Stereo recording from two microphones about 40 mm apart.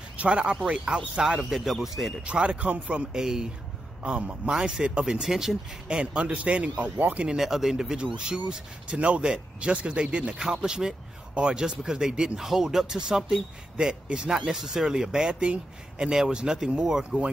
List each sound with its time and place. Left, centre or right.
0.2 s speech: right
1.4 s speech: centre
2.2 s speech: right
5.3 s speech: centre
5.9 s speech: right
6.7 s speech: right
7.2 s speech: centre